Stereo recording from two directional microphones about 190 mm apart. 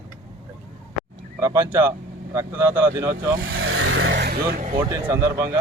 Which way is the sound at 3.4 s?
90° right.